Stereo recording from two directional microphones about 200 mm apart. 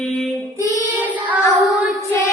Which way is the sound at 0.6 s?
15° right (ahead or behind).